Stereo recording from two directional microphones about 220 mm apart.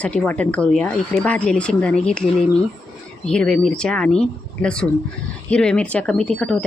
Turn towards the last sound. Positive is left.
turn(degrees=5)  # may be behind; listen again after turning